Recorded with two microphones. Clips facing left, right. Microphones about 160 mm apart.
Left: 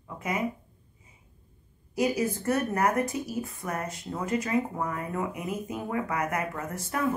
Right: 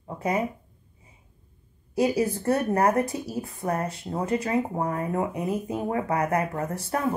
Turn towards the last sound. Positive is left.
turn(degrees=-35)  # may be behind; listen again after turning